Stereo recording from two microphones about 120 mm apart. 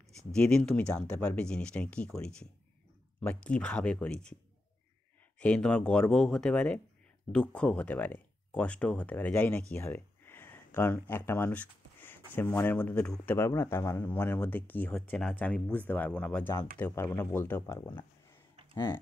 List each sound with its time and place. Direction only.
0.3 s speech: 5° left (ahead or behind)
5.4 s speech: 5° left (ahead or behind)
9.8 s a sound: 20° left (ahead or behind)
12.4 s speech: 20° left (ahead or behind)